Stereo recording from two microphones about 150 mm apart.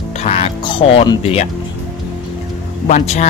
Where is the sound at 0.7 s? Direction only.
40° left (ahead or behind).